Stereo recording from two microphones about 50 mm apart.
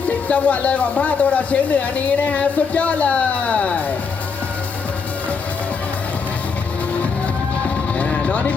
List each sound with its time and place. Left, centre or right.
0.0 s speech: left
7.9 s vehicle: left